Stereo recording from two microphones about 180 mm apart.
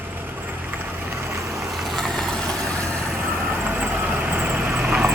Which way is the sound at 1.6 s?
Centre (ahead or behind).